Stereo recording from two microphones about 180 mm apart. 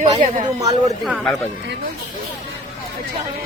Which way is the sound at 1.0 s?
Centre (ahead or behind).